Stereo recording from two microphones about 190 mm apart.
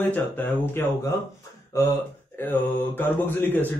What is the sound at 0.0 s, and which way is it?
A man's voice, 10° left (ahead or behind).